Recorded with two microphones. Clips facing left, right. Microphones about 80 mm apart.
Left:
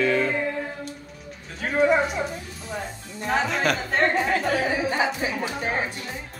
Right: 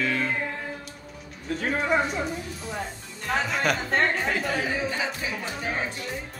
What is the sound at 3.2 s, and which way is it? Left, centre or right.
Speech, centre.